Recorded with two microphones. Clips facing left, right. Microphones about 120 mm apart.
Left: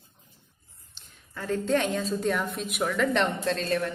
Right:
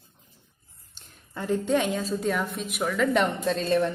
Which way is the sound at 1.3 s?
20° right (ahead or behind).